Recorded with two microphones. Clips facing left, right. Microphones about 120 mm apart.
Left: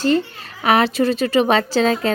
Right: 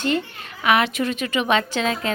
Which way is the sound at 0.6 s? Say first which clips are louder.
Left 4 dB; 35° left (ahead or behind).